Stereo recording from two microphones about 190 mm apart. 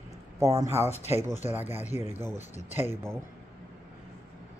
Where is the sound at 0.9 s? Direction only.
35° left (ahead or behind).